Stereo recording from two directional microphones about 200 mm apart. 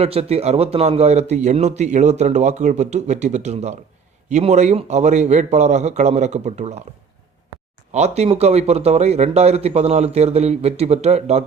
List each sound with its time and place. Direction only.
0.0 s a man's voice: 30° right (ahead or behind)
7.9 s a man's voice: 35° right (ahead or behind)